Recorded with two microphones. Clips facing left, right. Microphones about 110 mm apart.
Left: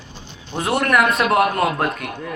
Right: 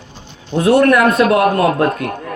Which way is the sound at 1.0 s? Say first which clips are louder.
Right 5 dB; 40° right (ahead or behind).